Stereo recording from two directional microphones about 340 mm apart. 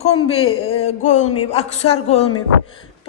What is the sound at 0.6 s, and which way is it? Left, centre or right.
Music, centre.